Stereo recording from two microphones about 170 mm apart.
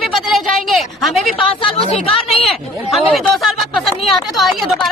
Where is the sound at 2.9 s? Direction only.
Centre (ahead or behind).